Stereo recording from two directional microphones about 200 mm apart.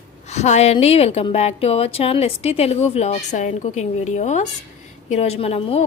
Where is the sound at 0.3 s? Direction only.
35° left (ahead or behind).